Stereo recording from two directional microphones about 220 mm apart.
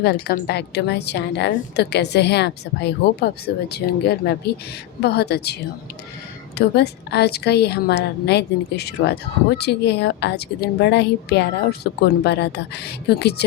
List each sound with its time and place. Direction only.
0.0 s a woman's voice: 45° left (ahead or behind)
6.6 s a woman's voice: 50° left (ahead or behind)